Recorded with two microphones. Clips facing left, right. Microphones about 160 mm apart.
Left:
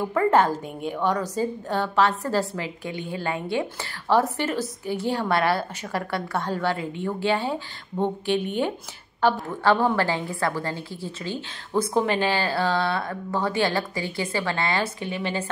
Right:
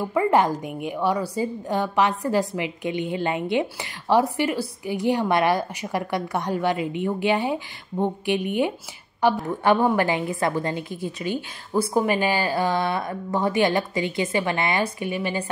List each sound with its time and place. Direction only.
0.1 s a woman's voice: 10° right (ahead or behind)